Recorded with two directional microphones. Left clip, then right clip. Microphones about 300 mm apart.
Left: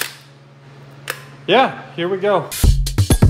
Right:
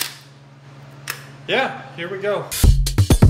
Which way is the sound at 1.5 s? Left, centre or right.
Left.